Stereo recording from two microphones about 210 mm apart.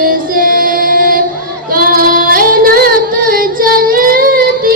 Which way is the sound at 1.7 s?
40° right (ahead or behind).